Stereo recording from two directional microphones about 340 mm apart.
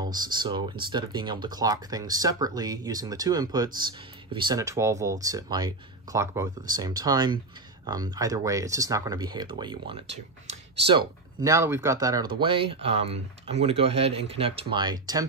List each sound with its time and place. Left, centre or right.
0.0 s speech: centre